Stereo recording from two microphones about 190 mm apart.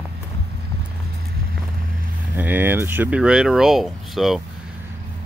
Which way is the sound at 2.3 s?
10° right (ahead or behind).